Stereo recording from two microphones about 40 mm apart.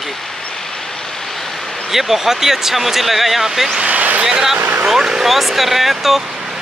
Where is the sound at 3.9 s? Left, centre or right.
Right.